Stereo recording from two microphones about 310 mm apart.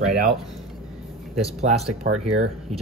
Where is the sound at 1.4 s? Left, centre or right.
Right.